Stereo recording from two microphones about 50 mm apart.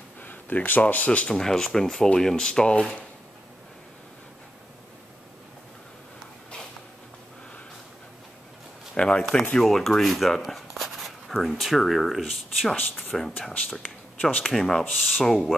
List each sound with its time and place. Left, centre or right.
0.2 s speech: left
1.3 s speech: centre
8.9 s speech: left
9.6 s speech: centre
13.1 s speech: centre
14.4 s speech: centre